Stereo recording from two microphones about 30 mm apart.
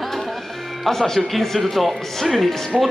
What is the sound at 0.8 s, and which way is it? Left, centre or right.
Speech, centre.